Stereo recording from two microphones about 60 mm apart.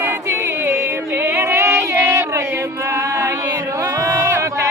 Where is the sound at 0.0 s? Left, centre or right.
Right.